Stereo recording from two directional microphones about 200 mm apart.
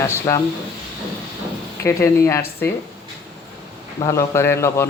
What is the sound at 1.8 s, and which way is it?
Speech, 15° left (ahead or behind).